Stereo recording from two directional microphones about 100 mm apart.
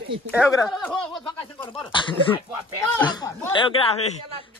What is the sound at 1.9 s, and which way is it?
Speech, 55° left (ahead or behind).